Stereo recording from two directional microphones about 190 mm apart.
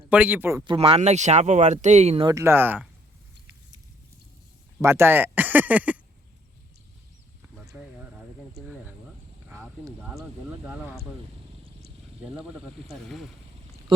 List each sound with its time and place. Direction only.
0.1 s speech: 10° right (ahead or behind)
0.7 s speech: 30° right (ahead or behind)
2.2 s speech: 15° right (ahead or behind)
4.8 s speech: 15° right (ahead or behind)
7.6 s a sound: centre (ahead or behind)
9.5 s a sound: 10° right (ahead or behind)
12.9 s speech: centre (ahead or behind)